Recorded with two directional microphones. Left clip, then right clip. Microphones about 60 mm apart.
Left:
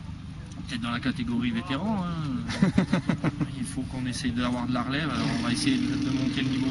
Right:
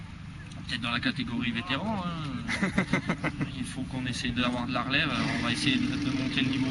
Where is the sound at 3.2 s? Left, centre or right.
Left.